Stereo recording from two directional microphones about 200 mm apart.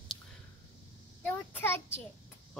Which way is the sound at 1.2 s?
10° left (ahead or behind).